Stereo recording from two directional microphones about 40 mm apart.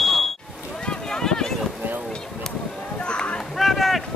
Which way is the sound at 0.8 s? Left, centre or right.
Centre.